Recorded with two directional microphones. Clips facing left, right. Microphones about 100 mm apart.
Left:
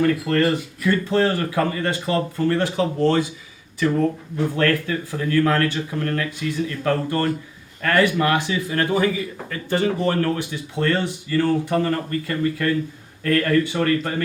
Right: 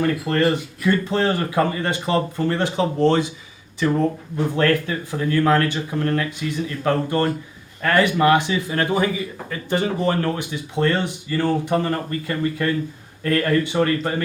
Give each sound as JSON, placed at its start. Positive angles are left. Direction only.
{"t": 0.3, "sound": "speech", "side_deg": -20}
{"t": 4.5, "sound": "speech", "side_deg": -20}